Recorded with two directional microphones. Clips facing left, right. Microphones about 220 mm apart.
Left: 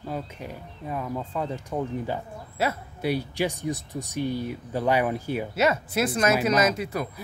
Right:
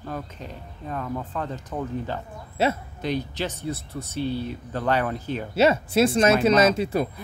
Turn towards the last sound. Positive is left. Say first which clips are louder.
# right 4 dB
turn(degrees=-30)  # may be behind; listen again after turning